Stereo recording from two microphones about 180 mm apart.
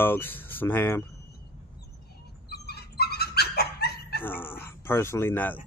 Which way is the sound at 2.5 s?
65° left (ahead or behind).